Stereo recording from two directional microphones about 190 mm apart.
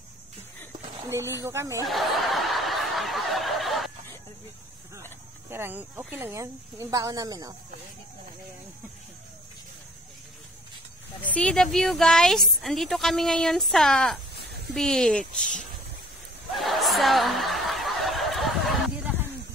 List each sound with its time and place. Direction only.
1.0 s speech: 15° right (ahead or behind)
1.9 s snicker: centre (ahead or behind)
5.5 s speech: 10° right (ahead or behind)
11.3 s speech: 5° left (ahead or behind)
16.5 s snicker: centre (ahead or behind)